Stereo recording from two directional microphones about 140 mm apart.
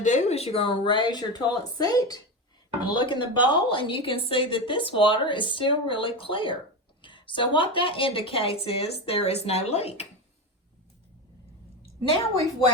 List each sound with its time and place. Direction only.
0.0 s a woman's voice: 55° left (ahead or behind)